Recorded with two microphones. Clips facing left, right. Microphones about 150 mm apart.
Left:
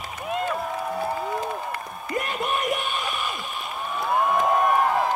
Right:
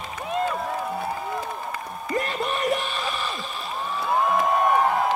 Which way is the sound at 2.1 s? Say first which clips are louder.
Even; 35° right (ahead or behind).